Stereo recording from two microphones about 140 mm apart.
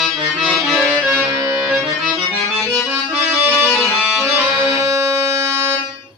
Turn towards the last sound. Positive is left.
turn(degrees=-25)  # may be behind; listen again after turning